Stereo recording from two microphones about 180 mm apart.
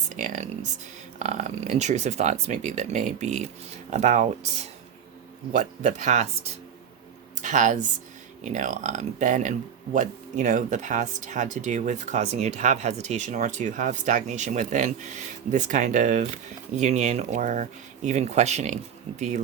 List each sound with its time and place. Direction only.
0.1 s speech: 40° right (ahead or behind)